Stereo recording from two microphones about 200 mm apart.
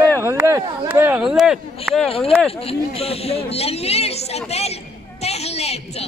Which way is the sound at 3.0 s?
30° left (ahead or behind).